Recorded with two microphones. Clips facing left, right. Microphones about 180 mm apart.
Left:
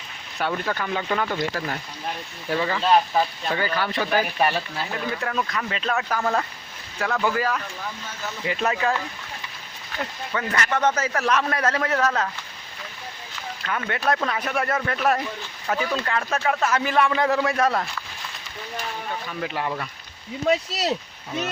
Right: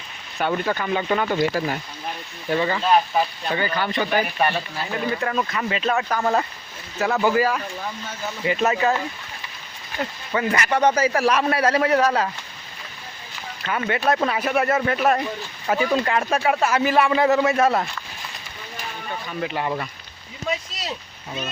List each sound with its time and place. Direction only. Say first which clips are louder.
0.3 s a man's voice: right 3 dB; 5° right (ahead or behind)
10.3 s a man's voice: right 4 dB; 10° right (ahead or behind)
13.7 s a man's voice: right 3 dB; 10° right (ahead or behind)
19.3 s speech: right 3 dB; centre (ahead or behind)
20.5 s speech: left 6 dB; 70° left (ahead or behind)